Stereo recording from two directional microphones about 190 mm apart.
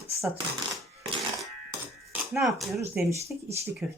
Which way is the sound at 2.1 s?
Centre (ahead or behind).